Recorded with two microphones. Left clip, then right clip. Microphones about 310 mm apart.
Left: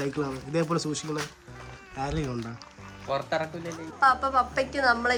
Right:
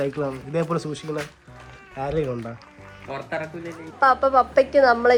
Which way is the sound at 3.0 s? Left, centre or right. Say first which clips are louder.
Left 1 dB; left.